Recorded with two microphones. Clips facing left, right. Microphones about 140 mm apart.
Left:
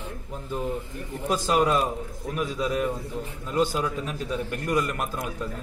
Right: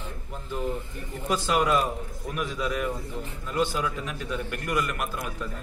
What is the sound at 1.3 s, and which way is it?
A man's voice, 35° left (ahead or behind).